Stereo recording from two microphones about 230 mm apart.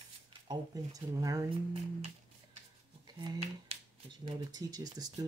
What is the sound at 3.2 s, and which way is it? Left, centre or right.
Speech, right.